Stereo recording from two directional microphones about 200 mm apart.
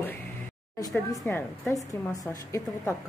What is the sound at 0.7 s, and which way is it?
A woman's voice, 15° left (ahead or behind).